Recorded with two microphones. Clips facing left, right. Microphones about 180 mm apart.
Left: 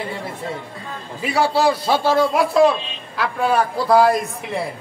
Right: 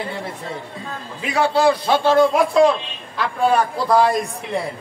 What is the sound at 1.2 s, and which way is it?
A man's voice, 5° left (ahead or behind).